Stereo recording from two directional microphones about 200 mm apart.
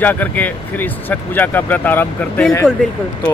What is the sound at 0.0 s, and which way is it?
Speech, 10° left (ahead or behind).